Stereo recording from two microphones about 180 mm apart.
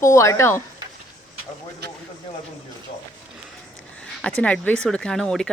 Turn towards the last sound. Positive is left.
turn(degrees=0)  # may be behind; listen again after turning